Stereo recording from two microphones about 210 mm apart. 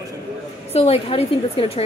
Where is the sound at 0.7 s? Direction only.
30° left (ahead or behind).